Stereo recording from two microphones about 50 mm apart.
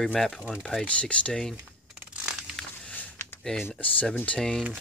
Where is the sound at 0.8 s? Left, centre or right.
Left.